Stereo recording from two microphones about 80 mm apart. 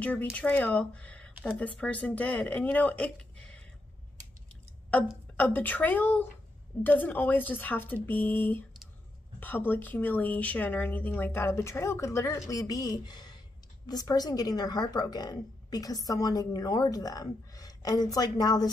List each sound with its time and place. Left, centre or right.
0.0 s speech: centre
5.4 s a woman's voice: left